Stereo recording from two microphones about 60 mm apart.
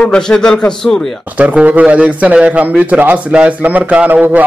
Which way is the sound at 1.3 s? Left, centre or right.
Right.